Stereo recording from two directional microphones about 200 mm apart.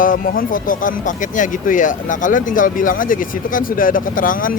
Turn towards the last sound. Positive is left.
turn(degrees=45)  # may be behind; listen again after turning